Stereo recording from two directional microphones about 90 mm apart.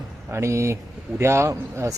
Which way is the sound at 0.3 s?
30° right (ahead or behind).